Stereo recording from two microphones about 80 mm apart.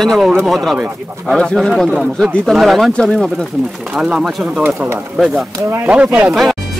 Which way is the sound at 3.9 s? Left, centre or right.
Centre.